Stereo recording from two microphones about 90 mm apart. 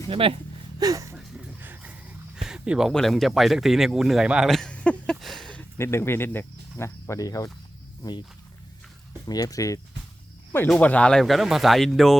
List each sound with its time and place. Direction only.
0.1 s speech: 90° right
0.8 s speech: 40° right (ahead or behind)
1.6 s a sound: 20° right (ahead or behind)
2.9 s speech: 5° left (ahead or behind)
4.4 s a sound: 5° left (ahead or behind)
5.7 s speech: 30° left (ahead or behind)
9.2 s speech: 45° left (ahead or behind)
10.8 s speech: 15° left (ahead or behind)
11.2 s speech: centre (ahead or behind)